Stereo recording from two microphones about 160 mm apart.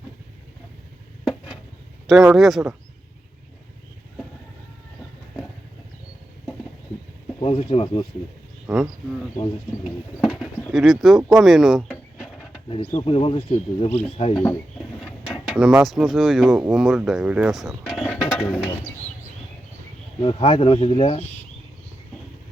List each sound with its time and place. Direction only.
2.0 s speech: 5° right (ahead or behind)
7.4 s speech: 35° left (ahead or behind)
8.6 s speech: 5° right (ahead or behind)
11.3 s a sound: centre (ahead or behind)
12.7 s speech: 40° left (ahead or behind)
15.0 s speech: centre (ahead or behind)
18.0 s a sound: 5° left (ahead or behind)
20.2 s speech: 35° left (ahead or behind)